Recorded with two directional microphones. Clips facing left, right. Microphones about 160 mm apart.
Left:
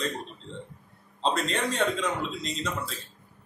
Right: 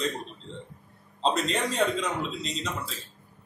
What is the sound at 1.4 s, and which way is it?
Speech, 35° right (ahead or behind).